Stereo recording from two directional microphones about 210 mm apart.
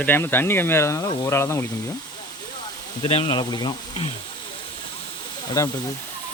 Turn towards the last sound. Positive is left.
turn(degrees=15)  # may be behind; listen again after turning